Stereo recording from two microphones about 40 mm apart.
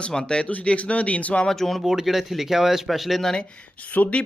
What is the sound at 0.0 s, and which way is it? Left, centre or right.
Speech, left.